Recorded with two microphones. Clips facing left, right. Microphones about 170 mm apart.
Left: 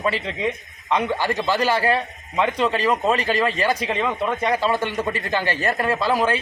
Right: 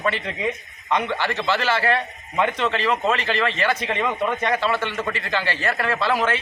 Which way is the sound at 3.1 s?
40° left (ahead or behind).